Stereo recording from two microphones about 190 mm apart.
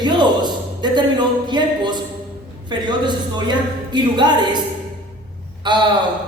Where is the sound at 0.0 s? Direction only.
25° right (ahead or behind).